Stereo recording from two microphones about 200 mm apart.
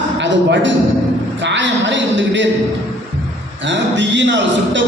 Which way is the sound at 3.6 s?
65° right (ahead or behind).